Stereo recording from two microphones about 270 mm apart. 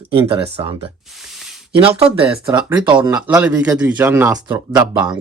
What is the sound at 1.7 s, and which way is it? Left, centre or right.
Speech, centre.